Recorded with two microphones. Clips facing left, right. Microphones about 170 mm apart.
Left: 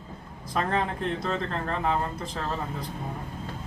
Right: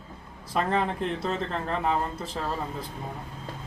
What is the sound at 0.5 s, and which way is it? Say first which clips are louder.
Speech: right 1 dB; centre (ahead or behind).